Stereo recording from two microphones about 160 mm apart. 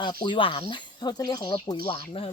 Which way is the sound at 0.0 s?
30° left (ahead or behind).